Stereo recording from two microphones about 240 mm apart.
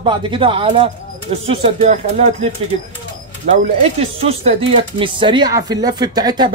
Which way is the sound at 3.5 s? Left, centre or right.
Right.